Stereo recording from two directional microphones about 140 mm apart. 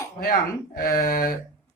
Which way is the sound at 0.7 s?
90° left.